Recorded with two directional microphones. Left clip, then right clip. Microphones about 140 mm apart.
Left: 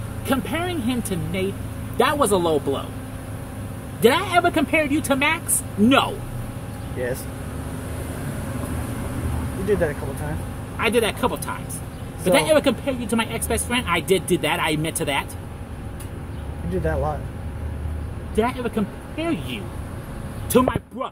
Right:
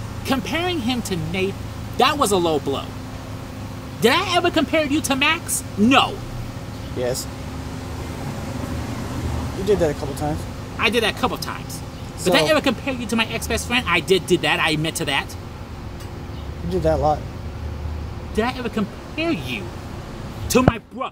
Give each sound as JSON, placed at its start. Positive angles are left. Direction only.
{"t": 0.3, "sound": "speech", "side_deg": -5}
{"t": 4.0, "sound": "speech", "side_deg": -5}
{"t": 10.8, "sound": "speech", "side_deg": -5}
{"t": 16.8, "sound": "speech", "side_deg": -45}
{"t": 18.3, "sound": "speech", "side_deg": -5}